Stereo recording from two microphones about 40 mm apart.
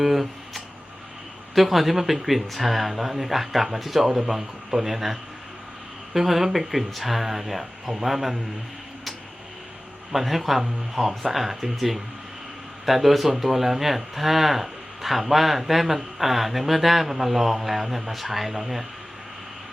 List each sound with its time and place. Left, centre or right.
0.0 s guitar: centre
1.5 s a man's voice: centre
6.1 s speech: centre
10.1 s speech: centre